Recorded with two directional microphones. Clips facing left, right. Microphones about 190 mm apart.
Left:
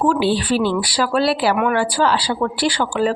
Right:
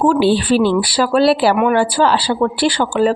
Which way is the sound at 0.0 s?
30° right (ahead or behind).